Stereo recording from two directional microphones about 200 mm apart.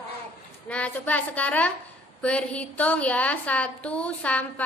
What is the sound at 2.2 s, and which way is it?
A woman's voice, 5° left (ahead or behind).